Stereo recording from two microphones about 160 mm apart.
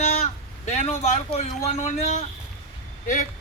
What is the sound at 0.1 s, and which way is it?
A man's voice, 45° left (ahead or behind).